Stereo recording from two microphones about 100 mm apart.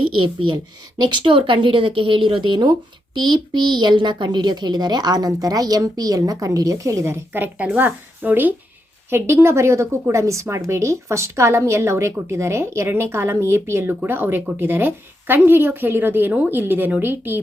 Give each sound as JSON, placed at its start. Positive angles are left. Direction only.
{"t": 0.2, "sound": "a woman's voice", "side_deg": -50}
{"t": 1.2, "sound": "a woman's voice", "side_deg": -60}